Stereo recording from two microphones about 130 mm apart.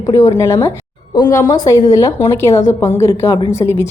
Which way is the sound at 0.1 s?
25° left (ahead or behind).